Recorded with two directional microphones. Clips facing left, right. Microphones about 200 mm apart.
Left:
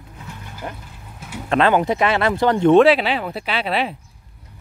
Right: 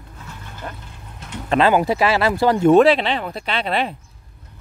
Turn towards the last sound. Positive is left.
turn(degrees=5)  # may be behind; listen again after turning